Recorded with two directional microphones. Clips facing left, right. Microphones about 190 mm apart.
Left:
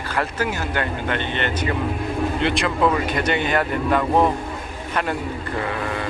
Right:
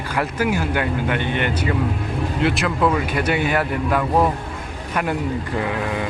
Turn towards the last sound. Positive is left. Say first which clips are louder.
# right 2 dB
turn(degrees=-15)  # may be behind; listen again after turning